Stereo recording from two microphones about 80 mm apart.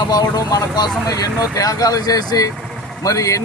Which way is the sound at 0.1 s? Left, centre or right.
Left.